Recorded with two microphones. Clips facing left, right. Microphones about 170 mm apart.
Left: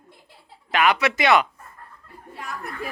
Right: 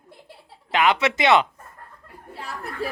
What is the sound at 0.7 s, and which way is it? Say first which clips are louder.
Speech: even; 20° right (ahead or behind).